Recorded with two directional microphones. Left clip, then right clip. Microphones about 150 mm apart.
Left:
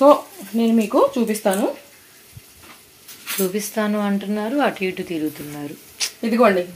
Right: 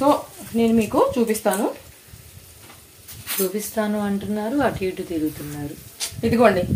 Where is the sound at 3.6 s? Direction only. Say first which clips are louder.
Left 2 dB; 10° left (ahead or behind).